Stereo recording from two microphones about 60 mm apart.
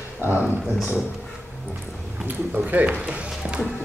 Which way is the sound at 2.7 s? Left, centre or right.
Right.